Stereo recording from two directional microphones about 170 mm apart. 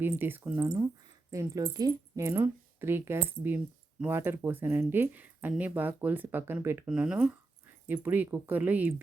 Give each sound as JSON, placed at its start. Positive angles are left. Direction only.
{"t": 0.0, "sound": "speech", "side_deg": -10}